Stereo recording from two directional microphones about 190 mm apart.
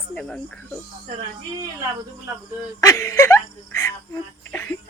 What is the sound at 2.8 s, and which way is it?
Speech, 15° left (ahead or behind).